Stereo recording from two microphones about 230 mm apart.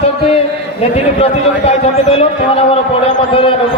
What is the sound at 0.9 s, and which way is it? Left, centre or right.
A man's voice, left.